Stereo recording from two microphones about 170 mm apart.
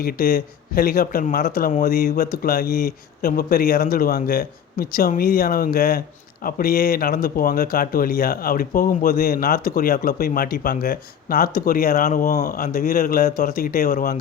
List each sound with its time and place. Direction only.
0.0 s speech: 60° left (ahead or behind)